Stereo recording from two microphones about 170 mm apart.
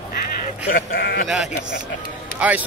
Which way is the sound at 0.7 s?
60° left (ahead or behind).